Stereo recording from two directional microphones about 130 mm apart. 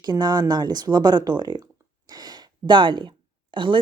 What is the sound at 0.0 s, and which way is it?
Speech, 30° right (ahead or behind).